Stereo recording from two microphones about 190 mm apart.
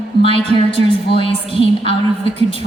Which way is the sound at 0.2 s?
30° left (ahead or behind).